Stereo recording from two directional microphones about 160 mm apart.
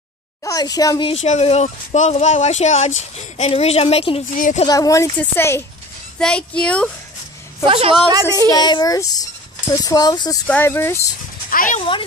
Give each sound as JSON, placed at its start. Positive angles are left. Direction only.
{"t": 0.4, "sound": "speech", "side_deg": 20}
{"t": 1.1, "sound": "speech", "side_deg": 45}
{"t": 4.4, "sound": "speech", "side_deg": 55}
{"t": 4.6, "sound": "a child's voice", "side_deg": 20}
{"t": 7.6, "sound": "a woman's voice", "side_deg": -35}
{"t": 8.1, "sound": "music", "side_deg": -20}
{"t": 8.5, "sound": "a child's voice", "side_deg": 25}
{"t": 10.4, "sound": "speech", "side_deg": 10}
{"t": 11.5, "sound": "speech", "side_deg": 55}